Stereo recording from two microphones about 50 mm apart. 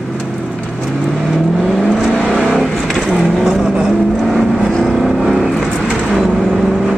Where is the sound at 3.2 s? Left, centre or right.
Centre.